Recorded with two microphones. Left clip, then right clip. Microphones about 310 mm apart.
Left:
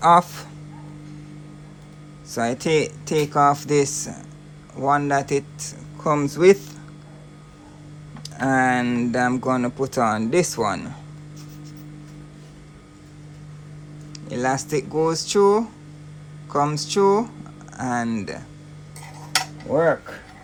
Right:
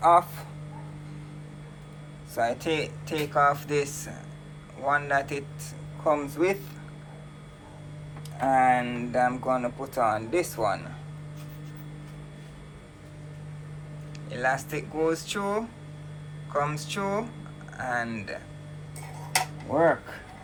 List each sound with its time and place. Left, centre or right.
0.0 s speech: left
2.3 s speech: left
8.2 s speech: left
14.1 s speech: centre